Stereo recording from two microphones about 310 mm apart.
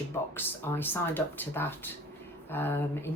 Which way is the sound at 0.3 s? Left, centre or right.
Centre.